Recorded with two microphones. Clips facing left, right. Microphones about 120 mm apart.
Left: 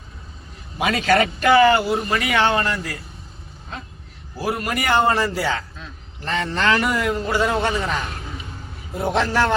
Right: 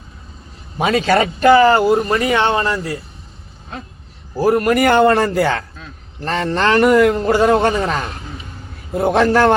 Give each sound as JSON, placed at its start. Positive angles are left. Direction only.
{"t": 0.8, "sound": "speech", "side_deg": -30}
{"t": 4.4, "sound": "a man's voice", "side_deg": -45}
{"t": 6.2, "sound": "speech", "side_deg": -40}
{"t": 6.7, "sound": "a man's voice", "side_deg": -55}